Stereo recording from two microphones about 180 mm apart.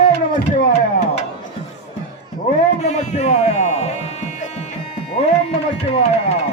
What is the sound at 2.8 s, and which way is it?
Music, 40° left (ahead or behind).